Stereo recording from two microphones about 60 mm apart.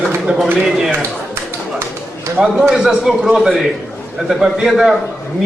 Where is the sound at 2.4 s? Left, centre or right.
Centre.